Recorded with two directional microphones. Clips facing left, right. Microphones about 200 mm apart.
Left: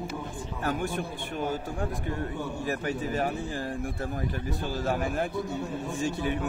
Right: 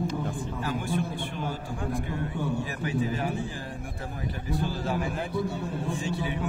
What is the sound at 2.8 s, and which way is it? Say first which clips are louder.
Speech: right 2 dB; 45° left (ahead or behind).